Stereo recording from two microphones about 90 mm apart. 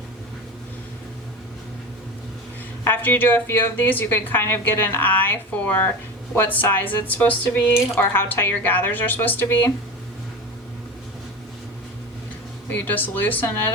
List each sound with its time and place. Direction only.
3.0 s speech: 20° left (ahead or behind)
12.7 s speech: 20° left (ahead or behind)